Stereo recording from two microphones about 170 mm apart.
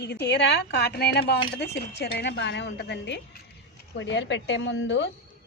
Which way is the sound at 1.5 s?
90° left.